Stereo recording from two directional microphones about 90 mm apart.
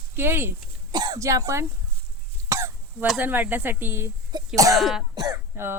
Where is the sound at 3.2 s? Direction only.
20° right (ahead or behind).